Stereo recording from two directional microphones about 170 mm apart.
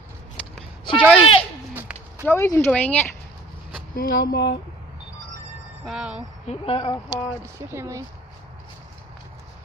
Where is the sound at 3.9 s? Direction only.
60° left (ahead or behind).